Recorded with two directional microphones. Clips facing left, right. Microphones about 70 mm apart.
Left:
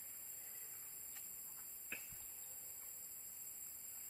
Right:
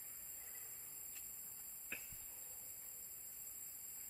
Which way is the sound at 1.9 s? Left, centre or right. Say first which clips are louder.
Even; centre.